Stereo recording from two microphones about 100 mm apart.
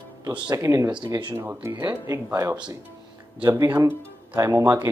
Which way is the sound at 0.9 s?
50° right (ahead or behind).